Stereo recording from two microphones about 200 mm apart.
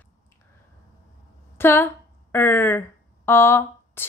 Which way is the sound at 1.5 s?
10° left (ahead or behind).